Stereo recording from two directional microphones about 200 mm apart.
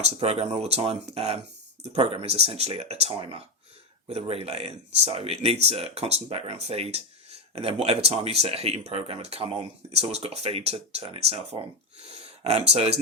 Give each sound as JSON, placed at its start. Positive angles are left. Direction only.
{"t": 0.0, "sound": "speech", "side_deg": -30}